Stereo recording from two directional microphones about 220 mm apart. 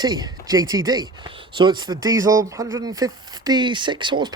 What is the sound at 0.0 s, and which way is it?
Speech, 20° right (ahead or behind).